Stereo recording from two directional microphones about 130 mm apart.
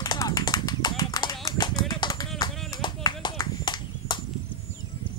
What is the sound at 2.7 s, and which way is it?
Horse, 30° left (ahead or behind).